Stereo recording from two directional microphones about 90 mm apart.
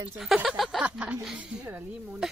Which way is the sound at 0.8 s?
15° right (ahead or behind).